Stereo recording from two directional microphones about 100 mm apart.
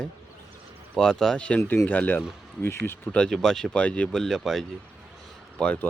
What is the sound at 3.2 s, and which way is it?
Speech, 5° left (ahead or behind).